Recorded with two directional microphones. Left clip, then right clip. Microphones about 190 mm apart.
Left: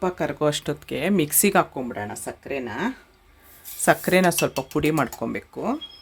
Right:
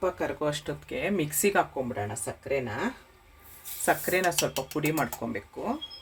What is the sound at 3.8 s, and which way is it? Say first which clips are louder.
Speech: left 7 dB; 65° left (ahead or behind).